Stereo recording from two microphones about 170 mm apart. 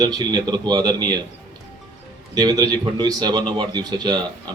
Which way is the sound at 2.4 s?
25° right (ahead or behind).